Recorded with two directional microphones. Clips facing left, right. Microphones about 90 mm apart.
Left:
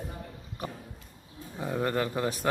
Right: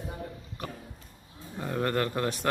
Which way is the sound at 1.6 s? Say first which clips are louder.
Even; 5° left (ahead or behind).